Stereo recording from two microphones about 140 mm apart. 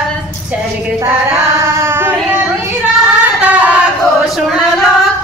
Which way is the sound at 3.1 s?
10° right (ahead or behind).